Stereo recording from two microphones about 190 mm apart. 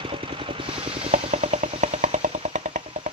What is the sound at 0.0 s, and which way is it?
Vehicle, 25° right (ahead or behind).